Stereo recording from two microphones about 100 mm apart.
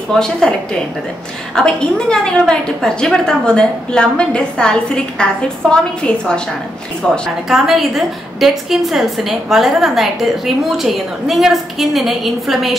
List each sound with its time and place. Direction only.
0.1 s a woman's voice: 5° left (ahead or behind)